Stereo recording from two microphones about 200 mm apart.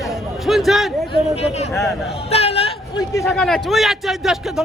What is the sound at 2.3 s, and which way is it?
Hubbub, 30° left (ahead or behind).